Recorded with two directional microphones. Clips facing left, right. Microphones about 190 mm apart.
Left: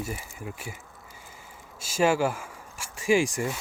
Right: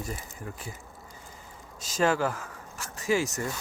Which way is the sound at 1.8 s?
10° left (ahead or behind).